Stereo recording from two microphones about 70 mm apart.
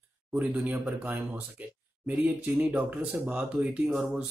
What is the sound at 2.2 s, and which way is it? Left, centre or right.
Speech, right.